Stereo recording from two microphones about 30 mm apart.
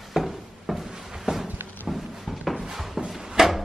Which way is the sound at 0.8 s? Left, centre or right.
Centre.